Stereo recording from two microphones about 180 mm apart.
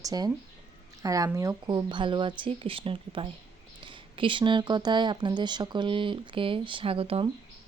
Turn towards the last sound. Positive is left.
turn(degrees=-30)  # may be behind; listen again after turning